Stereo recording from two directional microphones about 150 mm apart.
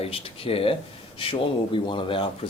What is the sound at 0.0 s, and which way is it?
Speech, 40° left (ahead or behind).